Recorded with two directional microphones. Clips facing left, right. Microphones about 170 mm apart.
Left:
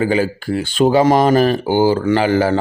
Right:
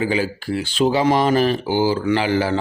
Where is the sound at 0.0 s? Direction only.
45° left (ahead or behind).